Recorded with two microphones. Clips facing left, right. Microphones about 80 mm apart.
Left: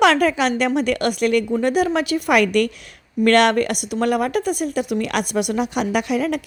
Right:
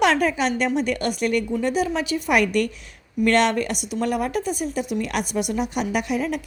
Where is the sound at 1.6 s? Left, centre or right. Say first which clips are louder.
Left 4 dB; left.